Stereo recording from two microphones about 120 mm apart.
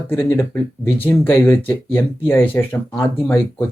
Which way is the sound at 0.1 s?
20° left (ahead or behind).